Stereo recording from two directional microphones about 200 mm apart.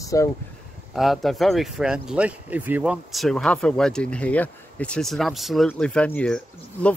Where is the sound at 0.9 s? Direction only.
Centre (ahead or behind).